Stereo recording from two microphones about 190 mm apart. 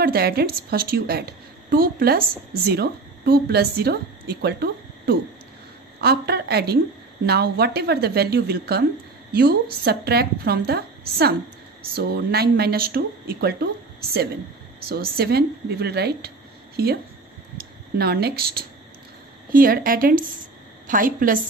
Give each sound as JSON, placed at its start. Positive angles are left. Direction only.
{"t": 0.0, "sound": "a woman's voice", "side_deg": -55}
{"t": 14.9, "sound": "a woman's voice", "side_deg": -55}